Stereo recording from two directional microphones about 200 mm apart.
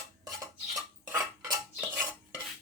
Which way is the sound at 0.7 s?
15° right (ahead or behind).